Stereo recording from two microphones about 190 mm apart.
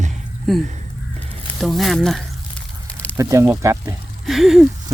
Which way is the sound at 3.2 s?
15° right (ahead or behind).